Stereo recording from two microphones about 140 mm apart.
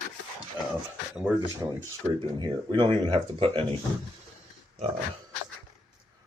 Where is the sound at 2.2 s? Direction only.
35° right (ahead or behind).